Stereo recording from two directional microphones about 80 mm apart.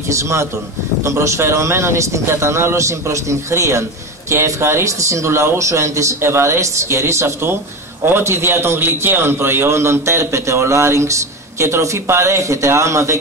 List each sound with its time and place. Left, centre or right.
0.1 s a man's voice: right